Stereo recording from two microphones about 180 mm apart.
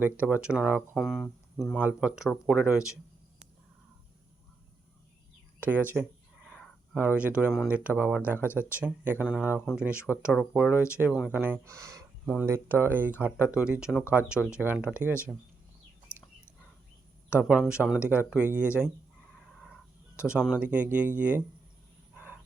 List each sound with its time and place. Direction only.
0.0 s speech: 10° right (ahead or behind)
1.8 s speech: 10° right (ahead or behind)
5.5 s a sound: 10° right (ahead or behind)
7.5 s speech: centre (ahead or behind); by 12.0 s 20° right (ahead or behind)
12.2 s speech: centre (ahead or behind)
12.5 s speech: 15° right (ahead or behind)
16.1 s chicken: 10° left (ahead or behind)
17.5 s speech: 5° right (ahead or behind)
19.7 s speech: 5° right (ahead or behind)
22.1 s cricket: 10° right (ahead or behind)